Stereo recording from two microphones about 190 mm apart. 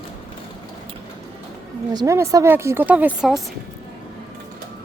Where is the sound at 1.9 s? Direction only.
20° right (ahead or behind); by 3.4 s centre (ahead or behind).